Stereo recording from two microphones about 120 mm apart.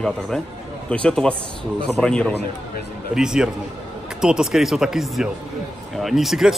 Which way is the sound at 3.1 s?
5° right (ahead or behind).